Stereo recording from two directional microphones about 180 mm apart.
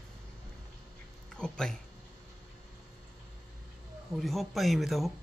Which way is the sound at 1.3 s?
5° left (ahead or behind).